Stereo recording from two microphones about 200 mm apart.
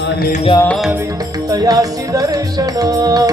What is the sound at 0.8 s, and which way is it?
Music, 10° right (ahead or behind).